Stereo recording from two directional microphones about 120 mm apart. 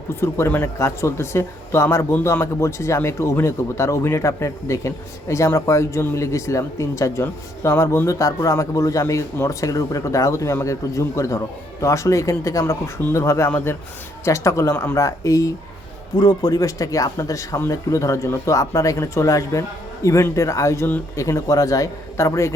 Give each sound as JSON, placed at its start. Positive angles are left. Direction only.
{"t": 0.2, "sound": "speech", "side_deg": 20}